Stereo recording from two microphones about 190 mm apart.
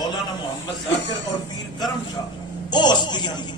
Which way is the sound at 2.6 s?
25° left (ahead or behind).